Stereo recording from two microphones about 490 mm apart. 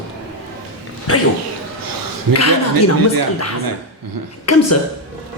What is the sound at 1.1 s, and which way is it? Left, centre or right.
Speech, left.